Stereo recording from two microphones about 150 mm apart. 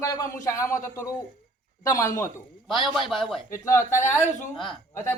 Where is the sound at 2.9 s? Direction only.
Centre (ahead or behind).